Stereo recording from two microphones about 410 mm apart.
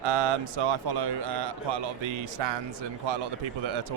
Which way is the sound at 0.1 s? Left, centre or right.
Right.